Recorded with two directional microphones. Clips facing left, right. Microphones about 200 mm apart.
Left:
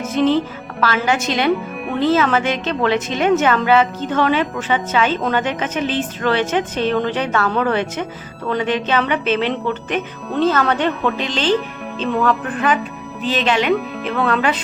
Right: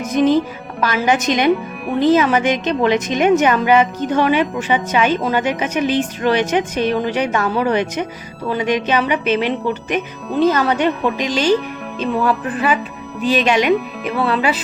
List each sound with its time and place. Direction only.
0.0 s a woman's voice: 15° right (ahead or behind)